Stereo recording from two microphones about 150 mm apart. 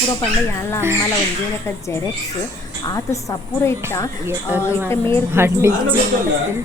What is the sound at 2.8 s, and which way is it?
Speech, 20° left (ahead or behind).